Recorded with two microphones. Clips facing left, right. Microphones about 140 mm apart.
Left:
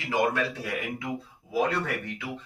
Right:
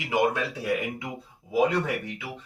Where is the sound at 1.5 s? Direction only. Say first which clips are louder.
Right 3 dB; 20° right (ahead or behind).